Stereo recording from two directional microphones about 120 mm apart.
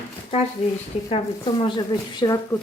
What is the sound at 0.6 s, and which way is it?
Speech, 60° left (ahead or behind).